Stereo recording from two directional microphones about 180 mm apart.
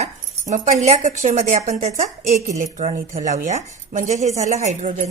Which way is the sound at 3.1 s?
40° right (ahead or behind).